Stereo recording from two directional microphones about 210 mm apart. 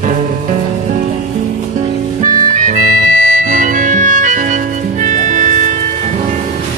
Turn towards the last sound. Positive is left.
turn(degrees=-35)  # may be behind; listen again after turning